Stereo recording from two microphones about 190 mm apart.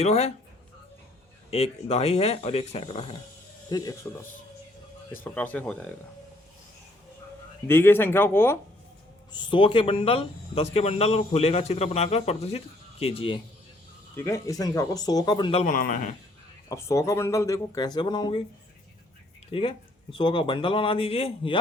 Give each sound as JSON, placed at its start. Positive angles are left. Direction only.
{"t": 0.0, "sound": "speech", "side_deg": 35}
{"t": 1.5, "sound": "speech", "side_deg": 35}
{"t": 3.7, "sound": "speech", "side_deg": 20}
{"t": 5.2, "sound": "speech", "side_deg": 10}
{"t": 7.7, "sound": "speech", "side_deg": 10}
{"t": 9.3, "sound": "speech", "side_deg": 25}
{"t": 14.2, "sound": "speech", "side_deg": 15}
{"t": 15.6, "sound": "a man's voice", "side_deg": 45}
{"t": 16.6, "sound": "speech", "side_deg": 15}
{"t": 19.5, "sound": "speech", "side_deg": 30}